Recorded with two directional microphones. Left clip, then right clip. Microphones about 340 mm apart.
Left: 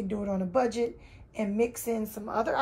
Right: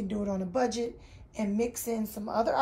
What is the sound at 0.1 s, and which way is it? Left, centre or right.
Speech, centre.